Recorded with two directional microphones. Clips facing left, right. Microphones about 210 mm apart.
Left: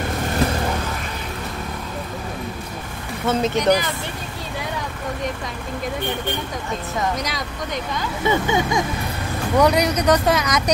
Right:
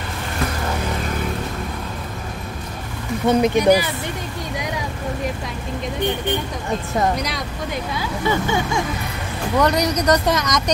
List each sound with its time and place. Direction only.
3.3 s speech: 15° right (ahead or behind)
7.2 s speech: centre (ahead or behind)
8.3 s speech: 20° left (ahead or behind)
9.6 s speech: 5° left (ahead or behind)